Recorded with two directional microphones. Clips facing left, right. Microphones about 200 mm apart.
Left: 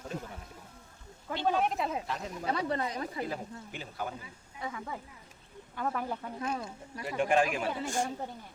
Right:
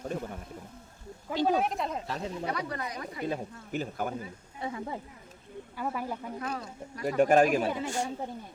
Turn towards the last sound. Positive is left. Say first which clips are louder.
# right 6 dB
turn(degrees=-40)  # may be behind; listen again after turning